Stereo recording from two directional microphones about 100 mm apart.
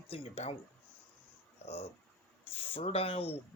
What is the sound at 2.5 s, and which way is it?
Speech, 70° left (ahead or behind).